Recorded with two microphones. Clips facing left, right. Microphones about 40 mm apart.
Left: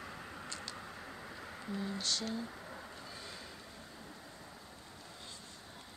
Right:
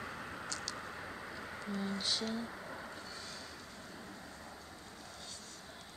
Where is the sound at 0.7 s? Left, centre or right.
Centre.